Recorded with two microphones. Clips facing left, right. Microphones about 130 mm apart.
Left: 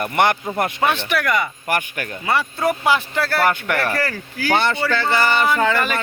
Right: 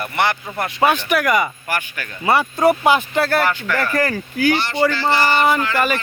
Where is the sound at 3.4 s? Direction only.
55° left (ahead or behind).